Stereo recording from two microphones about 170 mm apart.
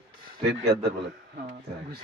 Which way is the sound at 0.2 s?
70° right (ahead or behind).